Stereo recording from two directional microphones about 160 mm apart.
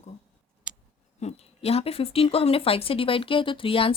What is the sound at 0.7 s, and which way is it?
Scissors, 5° right (ahead or behind).